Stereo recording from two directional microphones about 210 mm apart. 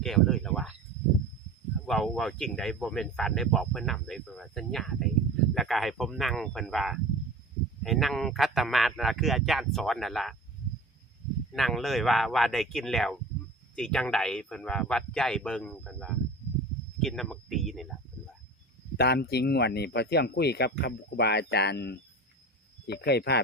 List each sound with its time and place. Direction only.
0.0 s a sound: centre (ahead or behind)
1.9 s speech: centre (ahead or behind)
11.5 s speech: centre (ahead or behind)
18.9 s speech: 50° left (ahead or behind)